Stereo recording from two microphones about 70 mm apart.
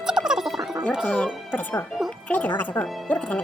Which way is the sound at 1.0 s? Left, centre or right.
Centre.